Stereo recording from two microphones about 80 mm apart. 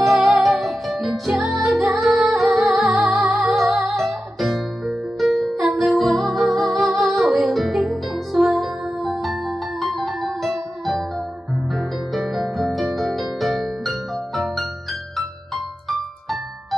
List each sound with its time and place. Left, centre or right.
0.0 s music: centre
3.3 s music: centre
3.9 s music: centre